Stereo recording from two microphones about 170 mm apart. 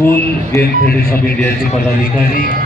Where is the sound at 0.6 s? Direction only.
60° left (ahead or behind).